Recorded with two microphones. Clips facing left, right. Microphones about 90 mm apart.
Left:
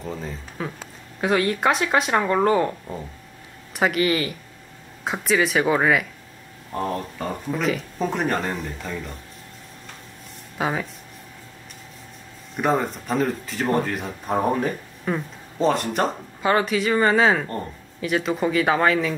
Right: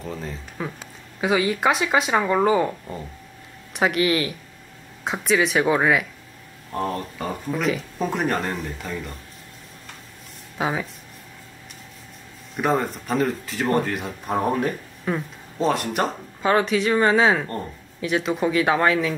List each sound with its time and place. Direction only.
0.0 s speech: centre (ahead or behind)
10.6 s speech: centre (ahead or behind)
12.5 s speech: centre (ahead or behind)